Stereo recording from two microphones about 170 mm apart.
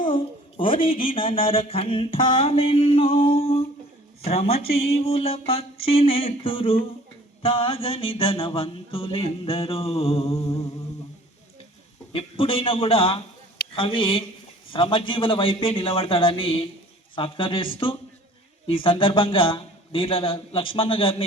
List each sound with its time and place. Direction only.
0.0 s speech: 30° left (ahead or behind)
2.1 s mantra: 30° left (ahead or behind)
12.1 s mantra: 35° left (ahead or behind)